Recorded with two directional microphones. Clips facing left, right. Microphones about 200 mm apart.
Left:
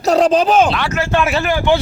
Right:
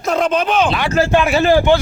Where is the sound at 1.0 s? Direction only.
35° right (ahead or behind).